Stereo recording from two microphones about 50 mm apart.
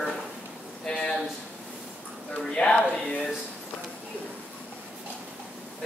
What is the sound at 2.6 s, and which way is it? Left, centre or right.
Speech, centre.